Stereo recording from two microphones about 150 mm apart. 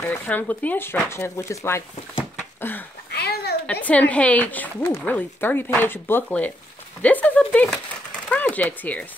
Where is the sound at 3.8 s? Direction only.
10° left (ahead or behind).